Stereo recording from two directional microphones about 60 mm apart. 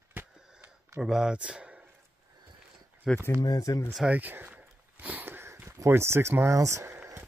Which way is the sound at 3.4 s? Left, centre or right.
Left.